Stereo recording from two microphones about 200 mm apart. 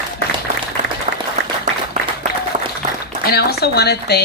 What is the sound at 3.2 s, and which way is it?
A woman's voice, 50° left (ahead or behind).